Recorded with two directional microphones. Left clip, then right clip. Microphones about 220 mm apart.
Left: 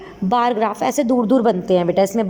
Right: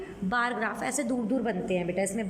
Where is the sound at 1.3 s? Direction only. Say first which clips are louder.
Left 14 dB; 90° left.